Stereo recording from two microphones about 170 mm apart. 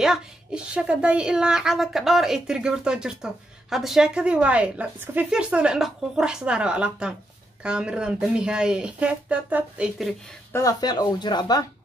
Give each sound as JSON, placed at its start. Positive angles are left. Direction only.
{"t": 0.0, "sound": "a woman's voice", "side_deg": -5}
{"t": 10.5, "sound": "speech", "side_deg": 20}